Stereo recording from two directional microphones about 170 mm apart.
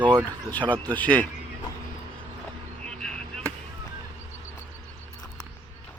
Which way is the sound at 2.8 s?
5° left (ahead or behind).